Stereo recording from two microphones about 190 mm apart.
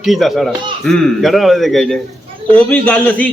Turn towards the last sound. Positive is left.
turn(degrees=5)  # may be behind; listen again after turning